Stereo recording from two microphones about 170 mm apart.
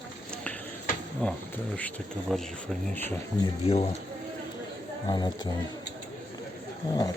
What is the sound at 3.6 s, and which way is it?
Speech, 35° left (ahead or behind).